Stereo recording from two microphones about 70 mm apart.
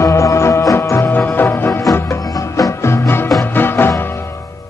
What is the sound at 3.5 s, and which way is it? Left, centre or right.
Music, left.